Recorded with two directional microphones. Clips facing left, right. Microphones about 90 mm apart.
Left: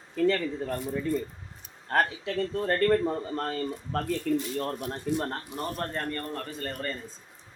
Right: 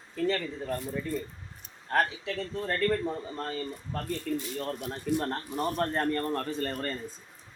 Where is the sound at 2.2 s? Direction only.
50° left (ahead or behind); by 4.0 s 70° left (ahead or behind).